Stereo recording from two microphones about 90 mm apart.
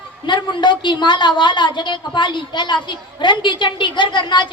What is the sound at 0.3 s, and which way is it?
A woman's voice, 60° left (ahead or behind).